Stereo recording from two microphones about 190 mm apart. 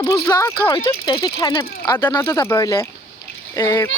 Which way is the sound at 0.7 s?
25° left (ahead or behind).